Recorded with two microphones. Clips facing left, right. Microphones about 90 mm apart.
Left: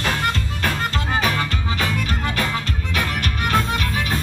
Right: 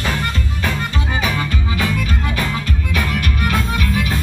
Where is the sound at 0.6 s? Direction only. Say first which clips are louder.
Right 3 dB; 50° left (ahead or behind).